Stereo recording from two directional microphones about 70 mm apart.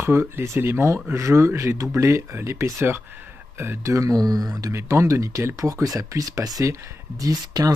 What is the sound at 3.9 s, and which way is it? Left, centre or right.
Speech, right.